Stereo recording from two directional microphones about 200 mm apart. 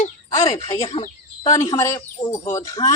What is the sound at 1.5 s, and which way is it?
Speech, 15° left (ahead or behind).